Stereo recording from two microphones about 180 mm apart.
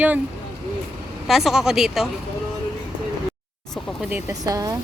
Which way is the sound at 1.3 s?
Centre (ahead or behind).